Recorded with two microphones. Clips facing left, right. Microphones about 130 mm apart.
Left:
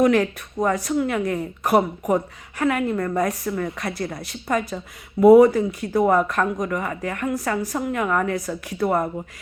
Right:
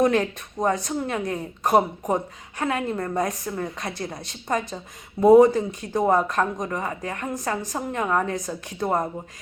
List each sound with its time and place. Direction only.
0.0 s a woman's voice: 25° right (ahead or behind)